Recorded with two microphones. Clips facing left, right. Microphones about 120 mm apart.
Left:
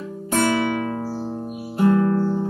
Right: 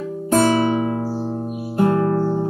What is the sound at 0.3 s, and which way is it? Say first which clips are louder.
Music: right 4 dB; 30° right (ahead or behind).